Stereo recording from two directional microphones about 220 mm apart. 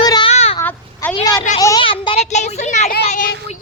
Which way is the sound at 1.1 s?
15° left (ahead or behind).